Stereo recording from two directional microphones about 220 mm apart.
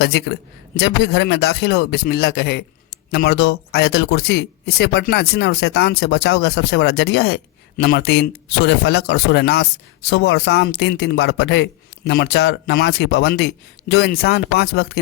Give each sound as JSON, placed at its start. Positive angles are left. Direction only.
{"t": 0.0, "sound": "speech", "side_deg": 50}